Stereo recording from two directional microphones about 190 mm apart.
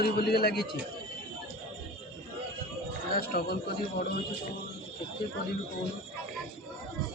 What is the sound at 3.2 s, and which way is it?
Speech, 55° left (ahead or behind).